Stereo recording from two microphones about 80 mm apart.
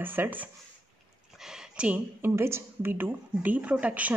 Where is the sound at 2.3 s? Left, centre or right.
Right.